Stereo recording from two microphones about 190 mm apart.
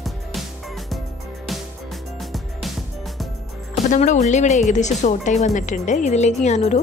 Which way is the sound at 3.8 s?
40° left (ahead or behind).